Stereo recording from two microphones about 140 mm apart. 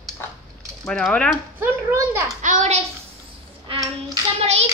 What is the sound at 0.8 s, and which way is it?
Speech, 5° left (ahead or behind).